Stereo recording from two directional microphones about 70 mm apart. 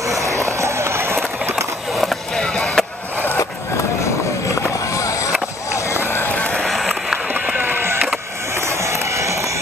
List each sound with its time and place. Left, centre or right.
0.2 s run: right
2.0 s skateboard: centre
4.9 s skateboard: left
6.0 s music: left
6.3 s music: centre
6.6 s a sound: centre
7.3 s run: right
8.6 s a sound: right